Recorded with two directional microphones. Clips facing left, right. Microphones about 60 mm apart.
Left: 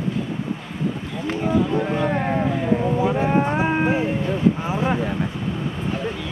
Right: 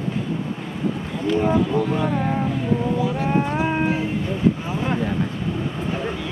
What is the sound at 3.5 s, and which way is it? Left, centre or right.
Livestock, left.